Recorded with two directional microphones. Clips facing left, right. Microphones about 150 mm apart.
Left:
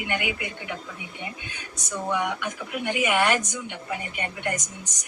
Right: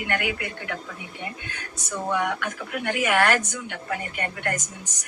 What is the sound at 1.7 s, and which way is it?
Speech, 10° right (ahead or behind).